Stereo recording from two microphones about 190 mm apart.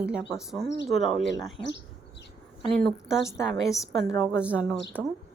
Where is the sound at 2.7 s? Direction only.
Centre (ahead or behind).